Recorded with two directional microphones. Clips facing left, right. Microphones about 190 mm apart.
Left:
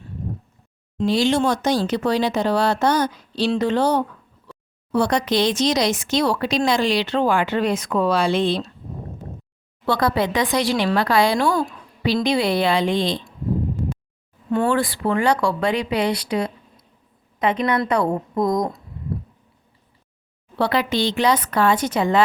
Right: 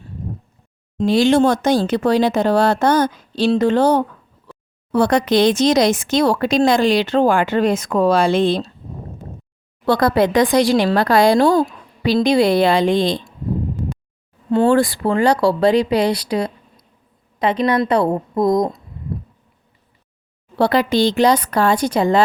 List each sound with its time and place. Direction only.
0.9 s speech: 50° right (ahead or behind)
9.8 s speech: 45° right (ahead or behind)
14.7 s speech: 40° right (ahead or behind)
20.6 s speech: 40° right (ahead or behind)